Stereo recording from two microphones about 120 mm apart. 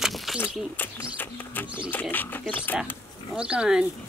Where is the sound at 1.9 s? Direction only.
15° left (ahead or behind).